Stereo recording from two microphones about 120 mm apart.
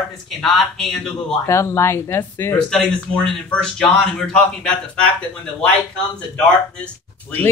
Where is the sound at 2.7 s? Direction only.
10° left (ahead or behind).